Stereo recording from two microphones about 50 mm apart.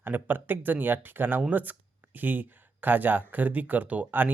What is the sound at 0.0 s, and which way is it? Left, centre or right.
Speech, right.